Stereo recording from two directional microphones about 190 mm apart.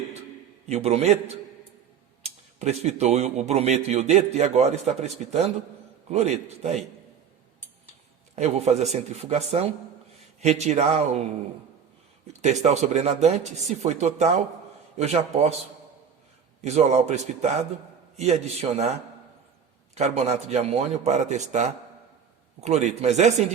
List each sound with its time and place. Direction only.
0.7 s speech: 35° right (ahead or behind)
8.4 s speech: 35° right (ahead or behind)
12.4 s speech: 40° right (ahead or behind)
16.6 s speech: 35° right (ahead or behind)
20.0 s speech: 35° right (ahead or behind)